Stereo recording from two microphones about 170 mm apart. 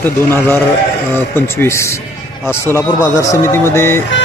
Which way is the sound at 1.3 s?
15° left (ahead or behind).